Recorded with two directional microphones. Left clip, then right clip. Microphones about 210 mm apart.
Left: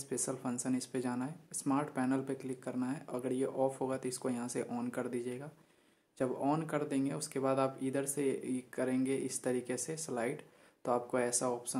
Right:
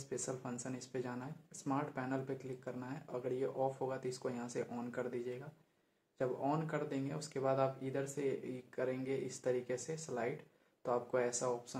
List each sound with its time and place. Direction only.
0.1 s speech: 35° left (ahead or behind)